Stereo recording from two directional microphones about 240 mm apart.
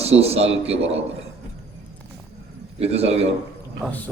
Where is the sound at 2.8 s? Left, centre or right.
Right.